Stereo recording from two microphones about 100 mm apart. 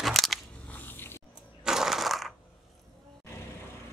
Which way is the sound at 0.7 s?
20° left (ahead or behind).